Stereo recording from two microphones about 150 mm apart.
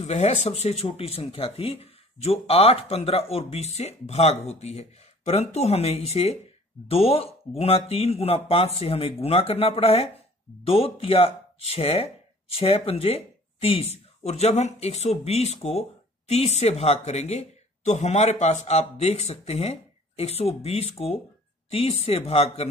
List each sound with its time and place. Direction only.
0.0 s speech: 45° left (ahead or behind)